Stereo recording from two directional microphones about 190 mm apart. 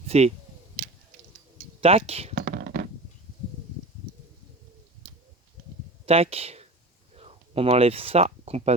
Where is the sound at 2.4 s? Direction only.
55° right (ahead or behind).